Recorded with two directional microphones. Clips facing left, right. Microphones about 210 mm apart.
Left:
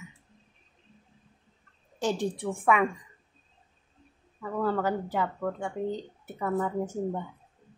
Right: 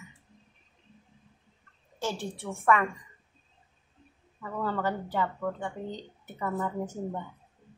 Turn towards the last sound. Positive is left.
turn(degrees=5)  # may be behind; listen again after turning